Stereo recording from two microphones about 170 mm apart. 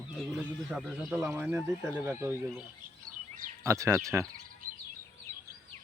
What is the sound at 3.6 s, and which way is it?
Speech, 15° right (ahead or behind).